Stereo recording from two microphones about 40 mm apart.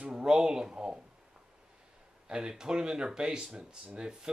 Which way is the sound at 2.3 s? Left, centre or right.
Centre.